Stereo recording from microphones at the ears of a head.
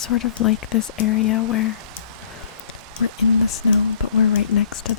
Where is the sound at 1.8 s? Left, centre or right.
Right.